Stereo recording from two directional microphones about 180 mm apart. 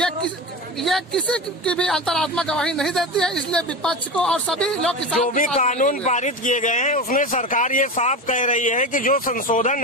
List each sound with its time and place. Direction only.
0.8 s speech: centre (ahead or behind)
5.5 s speech: 40° left (ahead or behind)